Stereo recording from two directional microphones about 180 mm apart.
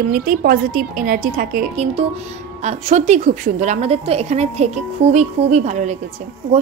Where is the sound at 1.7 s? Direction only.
35° right (ahead or behind).